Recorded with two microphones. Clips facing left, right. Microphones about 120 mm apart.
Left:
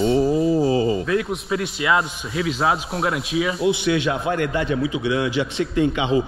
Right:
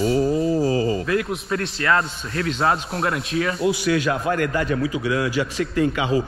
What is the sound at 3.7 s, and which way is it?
A man's voice, 40° right (ahead or behind).